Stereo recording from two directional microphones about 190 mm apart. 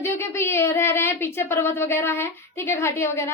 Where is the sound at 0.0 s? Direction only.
15° left (ahead or behind).